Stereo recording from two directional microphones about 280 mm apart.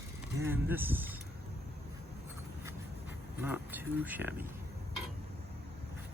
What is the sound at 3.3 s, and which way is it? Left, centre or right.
Speech, centre.